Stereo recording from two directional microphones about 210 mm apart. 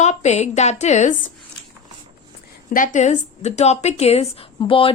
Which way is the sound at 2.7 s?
35° left (ahead or behind).